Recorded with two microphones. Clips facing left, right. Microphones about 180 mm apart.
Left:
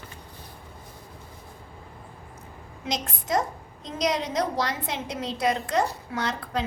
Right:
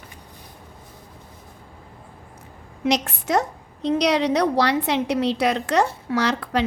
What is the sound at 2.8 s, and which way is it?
A woman's voice, 75° right (ahead or behind).